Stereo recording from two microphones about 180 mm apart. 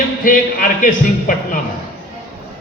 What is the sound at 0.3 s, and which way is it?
A man's voice, 45° left (ahead or behind).